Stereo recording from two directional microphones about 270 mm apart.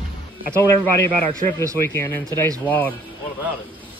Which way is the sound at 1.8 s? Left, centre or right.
Centre.